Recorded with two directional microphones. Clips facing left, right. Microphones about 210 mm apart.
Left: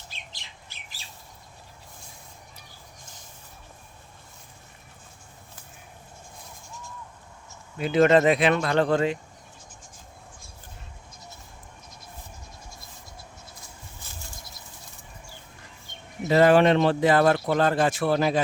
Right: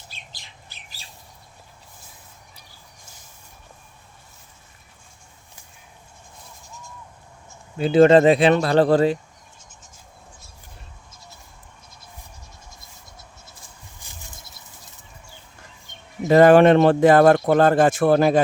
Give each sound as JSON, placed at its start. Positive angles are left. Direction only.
{"t": 7.8, "sound": "speech", "side_deg": -30}
{"t": 16.3, "sound": "speech", "side_deg": -50}